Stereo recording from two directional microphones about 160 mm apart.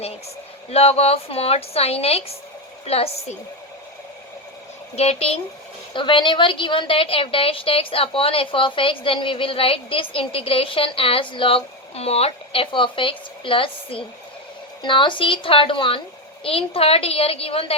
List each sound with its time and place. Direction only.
0.7 s a woman's voice: 40° left (ahead or behind)
4.9 s a woman's voice: 40° left (ahead or behind)